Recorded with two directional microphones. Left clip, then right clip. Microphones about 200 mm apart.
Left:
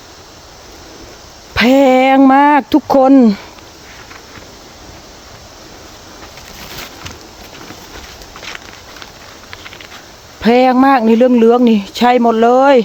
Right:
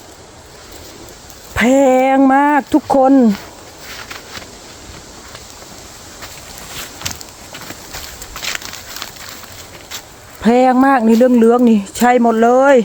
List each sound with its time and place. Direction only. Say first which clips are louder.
1.5 s speech: left 2 dB; 20° left (ahead or behind)
8.4 s a sound: right 6 dB; 65° right (ahead or behind)
10.4 s speech: left 2 dB; 10° left (ahead or behind)